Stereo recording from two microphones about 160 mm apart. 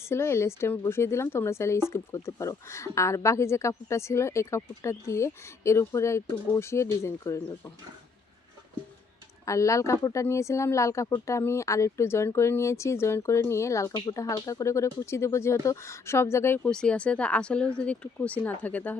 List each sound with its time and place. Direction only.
0.0 s speech: 15° left (ahead or behind)
9.5 s speech: 20° left (ahead or behind)